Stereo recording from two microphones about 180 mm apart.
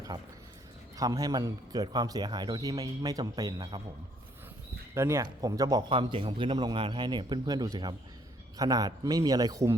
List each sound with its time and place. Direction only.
0.9 s a man's voice: 20° right (ahead or behind)
4.9 s a man's voice: 15° right (ahead or behind)